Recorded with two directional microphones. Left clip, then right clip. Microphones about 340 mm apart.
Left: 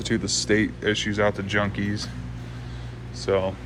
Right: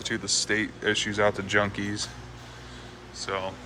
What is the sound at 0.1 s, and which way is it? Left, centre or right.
Speech, centre.